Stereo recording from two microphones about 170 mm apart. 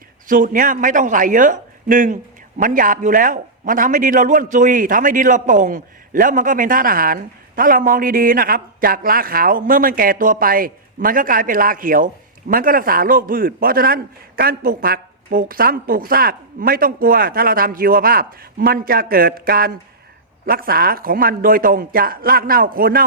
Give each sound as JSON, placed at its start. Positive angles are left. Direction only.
{"t": 0.3, "sound": "a man's voice", "side_deg": -50}